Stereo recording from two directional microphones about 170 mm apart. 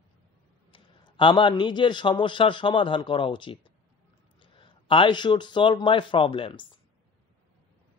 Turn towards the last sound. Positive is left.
turn(degrees=30)  # may be behind; listen again after turning